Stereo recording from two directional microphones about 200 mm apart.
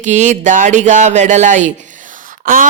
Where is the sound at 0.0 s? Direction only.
35° right (ahead or behind).